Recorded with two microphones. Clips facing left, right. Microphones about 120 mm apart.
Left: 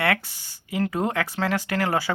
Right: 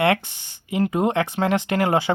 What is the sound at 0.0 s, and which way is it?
Speech, 20° right (ahead or behind).